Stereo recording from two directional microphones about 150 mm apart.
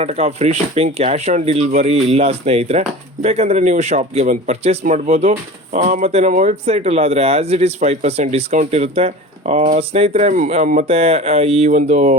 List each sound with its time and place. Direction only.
0.0 s speech: 45° right (ahead or behind)
10.8 s speech: 40° right (ahead or behind)